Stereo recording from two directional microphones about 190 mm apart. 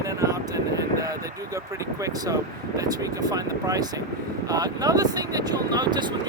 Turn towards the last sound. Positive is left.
turn(degrees=-25)  # may be behind; listen again after turning